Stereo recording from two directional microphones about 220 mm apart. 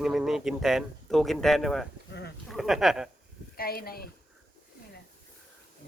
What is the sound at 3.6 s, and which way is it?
Speech, 45° left (ahead or behind).